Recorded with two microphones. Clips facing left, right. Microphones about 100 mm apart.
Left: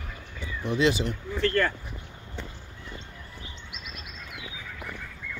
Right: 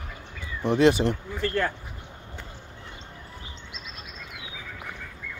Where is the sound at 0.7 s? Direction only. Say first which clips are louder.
Right 5 dB; 55° right (ahead or behind).